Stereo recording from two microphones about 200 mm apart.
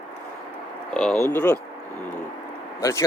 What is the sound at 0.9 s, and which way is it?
Speech, 5° left (ahead or behind).